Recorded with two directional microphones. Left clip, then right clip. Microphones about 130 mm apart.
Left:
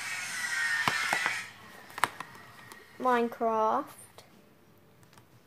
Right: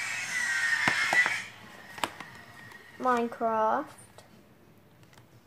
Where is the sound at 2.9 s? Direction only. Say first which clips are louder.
Even; 65° left (ahead or behind).